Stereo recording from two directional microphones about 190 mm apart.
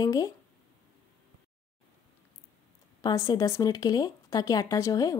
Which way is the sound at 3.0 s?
20° left (ahead or behind).